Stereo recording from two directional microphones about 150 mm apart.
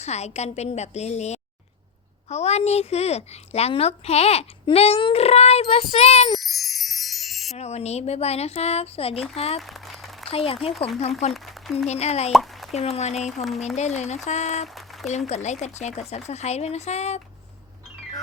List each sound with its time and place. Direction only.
0.0 s a woman's voice: 50° left (ahead or behind)
6.3 s wind chime: centre (ahead or behind)
7.5 s a woman's voice: 45° left (ahead or behind)
9.6 s a sound: centre (ahead or behind)
10.2 s speech: 40° left (ahead or behind)
11.3 s speech: centre (ahead or behind)
11.9 s a woman's voice: 45° left (ahead or behind)
12.3 s a sound: centre (ahead or behind)
12.7 s a woman's voice: 45° left (ahead or behind)